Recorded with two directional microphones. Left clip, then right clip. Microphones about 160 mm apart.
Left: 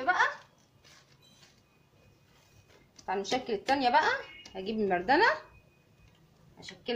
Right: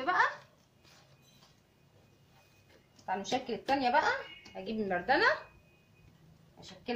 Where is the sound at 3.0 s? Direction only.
35° left (ahead or behind).